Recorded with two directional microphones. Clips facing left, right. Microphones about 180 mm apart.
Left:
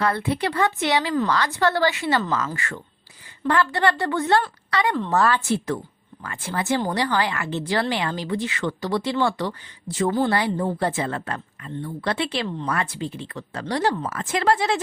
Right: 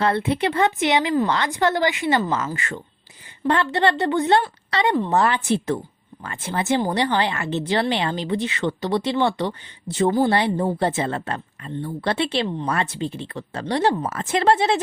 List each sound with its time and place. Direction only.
0.0 s a woman's voice: 25° right (ahead or behind)